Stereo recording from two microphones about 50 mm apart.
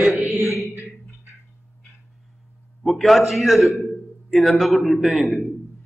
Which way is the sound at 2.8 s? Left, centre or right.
Centre.